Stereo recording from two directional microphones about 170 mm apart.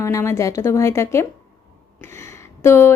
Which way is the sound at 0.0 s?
15° left (ahead or behind).